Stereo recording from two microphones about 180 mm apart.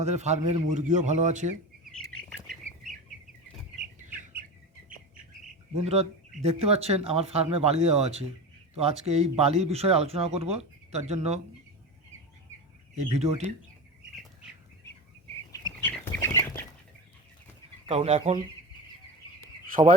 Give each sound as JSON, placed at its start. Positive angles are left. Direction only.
{"t": 0.0, "sound": "a man's voice", "side_deg": -40}
{"t": 1.8, "sound": "bird flight", "side_deg": 0}
{"t": 5.7, "sound": "speech", "side_deg": -35}
{"t": 13.1, "sound": "speech", "side_deg": -35}
{"t": 15.5, "sound": "bird", "side_deg": 15}
{"t": 17.8, "sound": "speech", "side_deg": -35}